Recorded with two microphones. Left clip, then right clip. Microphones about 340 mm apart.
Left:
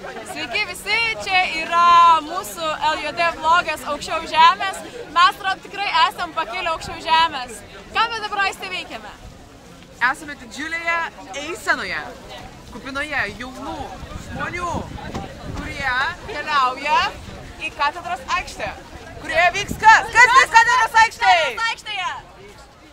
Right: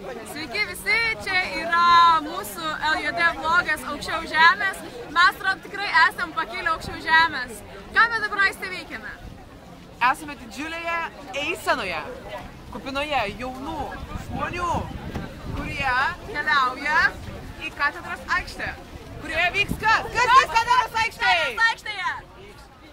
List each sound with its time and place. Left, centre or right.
0.4 s a woman's voice: centre
9.9 s speech: centre
14.5 s speech: centre; by 21.5 s left
21.5 s speech: centre